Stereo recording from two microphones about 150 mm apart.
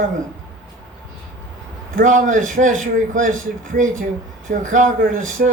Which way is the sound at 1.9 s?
60° right (ahead or behind).